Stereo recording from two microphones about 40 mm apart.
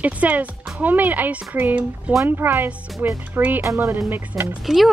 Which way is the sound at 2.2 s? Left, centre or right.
Right.